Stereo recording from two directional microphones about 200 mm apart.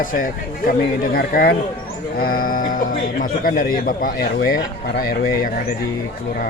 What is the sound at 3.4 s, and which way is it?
A man's voice, 45° left (ahead or behind).